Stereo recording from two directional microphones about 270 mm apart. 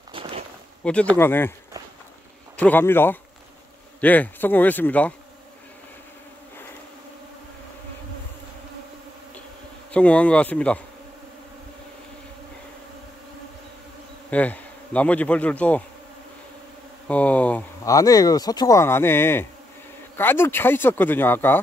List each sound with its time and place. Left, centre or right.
0.1 s a sound: centre
0.8 s speech: centre
2.6 s speech: centre
9.9 s speech: centre
14.3 s speech: centre
17.1 s speech: centre